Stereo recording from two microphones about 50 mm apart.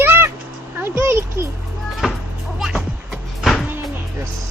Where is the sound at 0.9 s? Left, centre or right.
Right.